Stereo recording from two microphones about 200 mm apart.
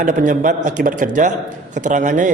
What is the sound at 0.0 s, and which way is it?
A man's voice, 40° right (ahead or behind).